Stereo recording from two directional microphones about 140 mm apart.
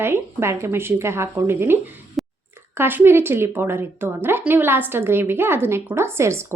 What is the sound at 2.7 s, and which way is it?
A woman's voice, 15° right (ahead or behind).